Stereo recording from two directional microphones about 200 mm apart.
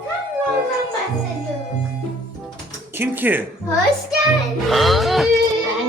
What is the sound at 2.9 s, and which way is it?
Speech, 10° right (ahead or behind).